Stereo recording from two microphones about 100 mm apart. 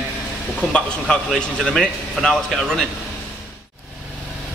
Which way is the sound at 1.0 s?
5° left (ahead or behind).